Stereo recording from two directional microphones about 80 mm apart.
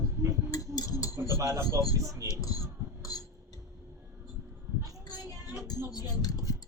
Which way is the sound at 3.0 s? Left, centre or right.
Left.